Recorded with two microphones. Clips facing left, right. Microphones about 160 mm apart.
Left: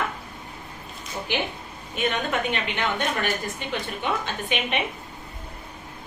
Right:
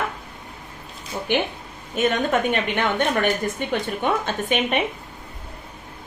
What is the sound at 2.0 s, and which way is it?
A woman's voice, 45° right (ahead or behind).